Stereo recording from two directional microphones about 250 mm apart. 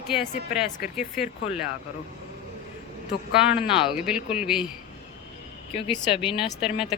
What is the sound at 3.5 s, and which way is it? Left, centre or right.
Speech, centre.